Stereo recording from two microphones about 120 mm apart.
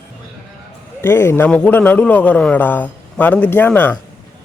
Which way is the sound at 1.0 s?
20° left (ahead or behind).